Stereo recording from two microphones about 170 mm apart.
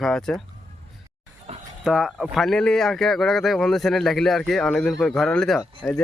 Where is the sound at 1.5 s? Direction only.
40° right (ahead or behind).